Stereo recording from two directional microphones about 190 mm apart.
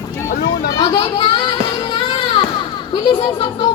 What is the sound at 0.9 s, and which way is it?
Speech, 25° left (ahead or behind).